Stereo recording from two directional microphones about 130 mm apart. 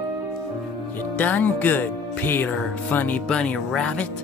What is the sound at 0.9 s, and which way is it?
Speech, 10° left (ahead or behind).